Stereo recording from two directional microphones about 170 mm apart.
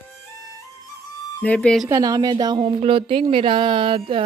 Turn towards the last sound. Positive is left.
turn(degrees=-30)  # may be behind; listen again after turning